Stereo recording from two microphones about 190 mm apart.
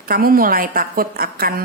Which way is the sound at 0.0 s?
50° right (ahead or behind).